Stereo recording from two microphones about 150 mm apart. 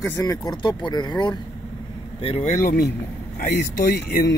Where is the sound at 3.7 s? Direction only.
80° left.